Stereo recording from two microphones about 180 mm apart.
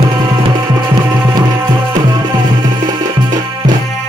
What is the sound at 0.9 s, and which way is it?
Music, 25° right (ahead or behind).